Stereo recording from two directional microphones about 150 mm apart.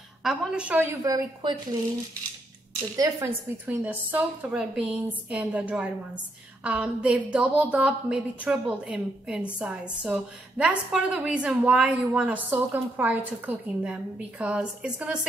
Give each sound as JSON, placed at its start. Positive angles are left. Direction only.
{"t": 0.2, "sound": "a woman's voice", "side_deg": -5}
{"t": 1.0, "sound": "a woman's voice", "side_deg": -25}
{"t": 3.0, "sound": "a woman's voice", "side_deg": -15}